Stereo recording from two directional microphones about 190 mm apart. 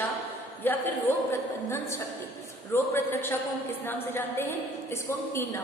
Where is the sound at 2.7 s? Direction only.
10° left (ahead or behind).